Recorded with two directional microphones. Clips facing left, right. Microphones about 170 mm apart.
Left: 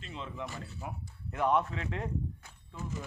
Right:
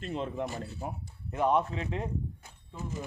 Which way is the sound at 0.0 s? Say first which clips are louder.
Right 7 dB; 45° right (ahead or behind).